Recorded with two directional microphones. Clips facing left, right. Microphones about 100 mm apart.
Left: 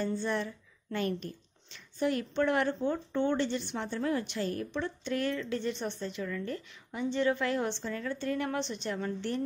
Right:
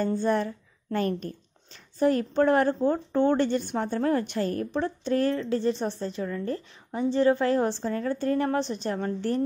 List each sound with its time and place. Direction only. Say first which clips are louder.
0.0 s a woman's voice: right 7 dB; 45° right (ahead or behind)